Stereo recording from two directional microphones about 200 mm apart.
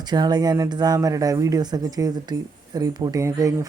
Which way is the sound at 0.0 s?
20° right (ahead or behind).